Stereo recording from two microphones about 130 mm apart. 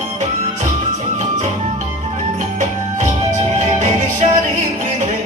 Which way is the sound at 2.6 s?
75° right (ahead or behind).